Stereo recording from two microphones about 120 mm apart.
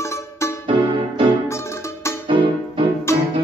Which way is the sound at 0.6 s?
45° right (ahead or behind).